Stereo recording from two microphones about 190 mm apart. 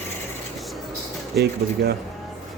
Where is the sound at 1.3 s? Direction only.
55° right (ahead or behind).